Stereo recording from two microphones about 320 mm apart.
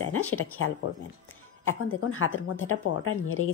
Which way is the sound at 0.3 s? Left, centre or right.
Left.